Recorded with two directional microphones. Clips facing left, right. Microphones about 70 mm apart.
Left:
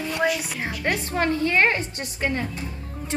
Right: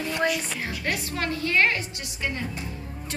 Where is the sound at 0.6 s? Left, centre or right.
Left.